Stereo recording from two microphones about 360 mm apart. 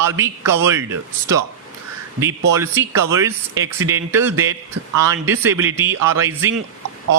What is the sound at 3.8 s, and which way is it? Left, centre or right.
Speech, centre.